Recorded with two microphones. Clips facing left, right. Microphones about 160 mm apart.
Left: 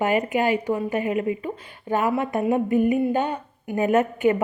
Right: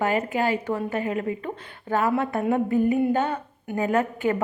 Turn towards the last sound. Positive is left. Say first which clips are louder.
# left 4 dB
turn(degrees=20)  # may be behind; listen again after turning